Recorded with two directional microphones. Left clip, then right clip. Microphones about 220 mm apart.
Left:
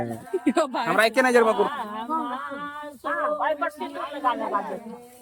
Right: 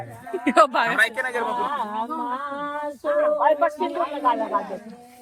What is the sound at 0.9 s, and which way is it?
Speech, 50° left (ahead or behind).